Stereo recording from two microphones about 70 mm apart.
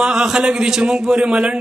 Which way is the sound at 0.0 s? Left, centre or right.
Centre.